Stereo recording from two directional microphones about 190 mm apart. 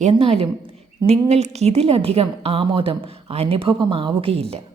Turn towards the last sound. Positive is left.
turn(degrees=-30)  # may be behind; listen again after turning